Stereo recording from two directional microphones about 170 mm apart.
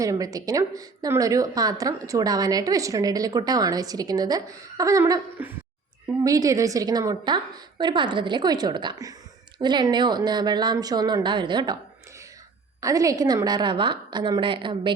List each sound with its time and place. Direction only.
0.0 s speech: 20° right (ahead or behind)
6.2 s speech: 20° right (ahead or behind)
12.8 s speech: 20° right (ahead or behind)